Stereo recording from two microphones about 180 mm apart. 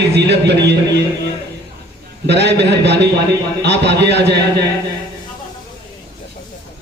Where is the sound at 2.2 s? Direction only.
70° right (ahead or behind).